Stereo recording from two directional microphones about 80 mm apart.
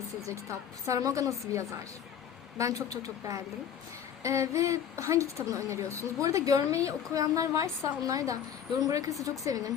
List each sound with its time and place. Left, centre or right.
0.9 s a woman's voice: right